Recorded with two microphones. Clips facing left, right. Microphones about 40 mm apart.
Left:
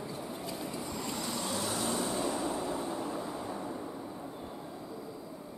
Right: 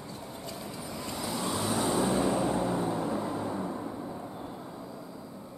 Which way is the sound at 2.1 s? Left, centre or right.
Right.